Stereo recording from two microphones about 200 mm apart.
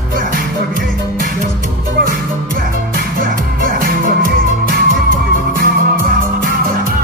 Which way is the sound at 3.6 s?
45° right (ahead or behind).